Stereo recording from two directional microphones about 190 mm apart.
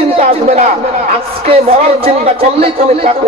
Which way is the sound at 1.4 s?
30° right (ahead or behind).